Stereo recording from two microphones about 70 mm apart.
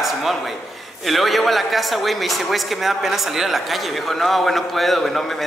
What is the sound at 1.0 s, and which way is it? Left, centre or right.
A man's voice, centre.